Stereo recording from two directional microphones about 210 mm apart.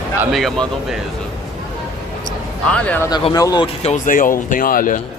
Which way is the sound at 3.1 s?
20° left (ahead or behind).